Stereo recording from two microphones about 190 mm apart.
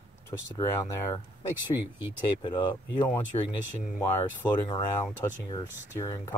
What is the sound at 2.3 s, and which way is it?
Speech, 25° left (ahead or behind).